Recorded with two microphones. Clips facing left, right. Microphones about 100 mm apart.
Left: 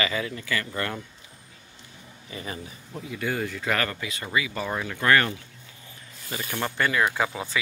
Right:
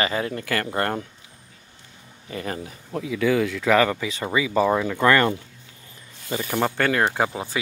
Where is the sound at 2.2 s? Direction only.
50° right (ahead or behind); by 3.6 s 90° right.